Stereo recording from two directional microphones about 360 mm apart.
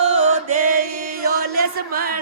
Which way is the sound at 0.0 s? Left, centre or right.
Centre.